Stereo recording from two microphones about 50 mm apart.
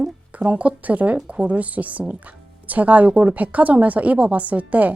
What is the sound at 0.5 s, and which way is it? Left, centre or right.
A woman's voice, right.